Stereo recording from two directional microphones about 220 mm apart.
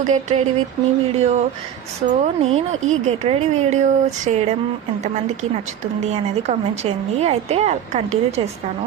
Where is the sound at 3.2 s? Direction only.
30° right (ahead or behind).